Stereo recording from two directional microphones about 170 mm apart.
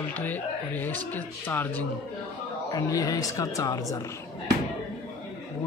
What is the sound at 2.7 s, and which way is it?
Speech, 20° left (ahead or behind).